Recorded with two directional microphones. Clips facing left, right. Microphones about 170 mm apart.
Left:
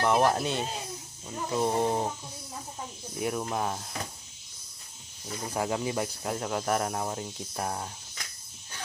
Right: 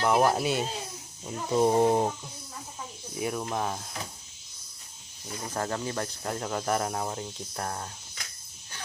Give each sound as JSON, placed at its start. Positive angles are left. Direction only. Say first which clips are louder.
{"t": 0.0, "sound": "speech", "louder": "right 1 dB", "side_deg": -5}
{"t": 3.2, "sound": "speech", "louder": "even", "side_deg": 0}
{"t": 5.5, "sound": "speech", "louder": "left 2 dB", "side_deg": 10}